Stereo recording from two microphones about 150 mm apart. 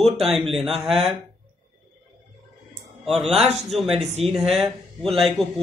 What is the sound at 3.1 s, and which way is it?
Speech, centre (ahead or behind).